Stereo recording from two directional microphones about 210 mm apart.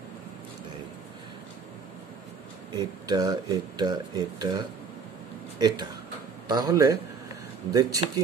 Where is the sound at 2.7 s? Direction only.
20° right (ahead or behind).